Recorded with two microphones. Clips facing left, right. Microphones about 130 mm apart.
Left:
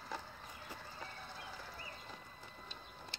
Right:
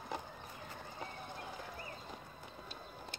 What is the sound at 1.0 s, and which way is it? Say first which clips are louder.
Clip-clop: right 7 dB; 15° right (ahead or behind).